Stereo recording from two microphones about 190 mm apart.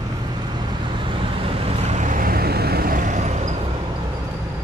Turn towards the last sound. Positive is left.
turn(degrees=-35)  # may be behind; listen again after turning